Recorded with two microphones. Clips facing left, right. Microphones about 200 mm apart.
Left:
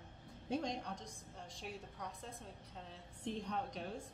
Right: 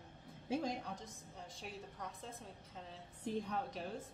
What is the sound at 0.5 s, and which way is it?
A woman's voice, 5° right (ahead or behind).